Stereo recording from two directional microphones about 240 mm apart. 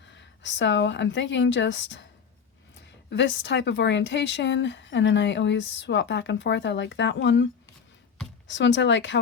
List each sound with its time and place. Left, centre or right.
0.0 s a woman's voice: left
3.1 s speech: left
8.4 s speech: left